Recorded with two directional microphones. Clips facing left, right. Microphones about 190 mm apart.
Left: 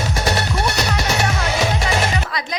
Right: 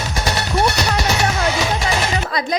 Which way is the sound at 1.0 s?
55° left (ahead or behind).